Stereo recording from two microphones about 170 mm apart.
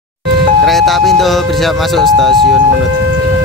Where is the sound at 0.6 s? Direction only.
Centre (ahead or behind).